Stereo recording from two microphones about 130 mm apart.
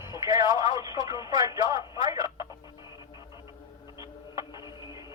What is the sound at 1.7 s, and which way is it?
Telephone, 30° right (ahead or behind).